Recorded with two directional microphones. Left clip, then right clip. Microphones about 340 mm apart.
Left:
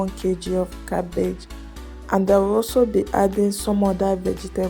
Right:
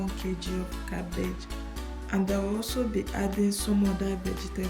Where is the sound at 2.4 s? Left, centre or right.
Centre.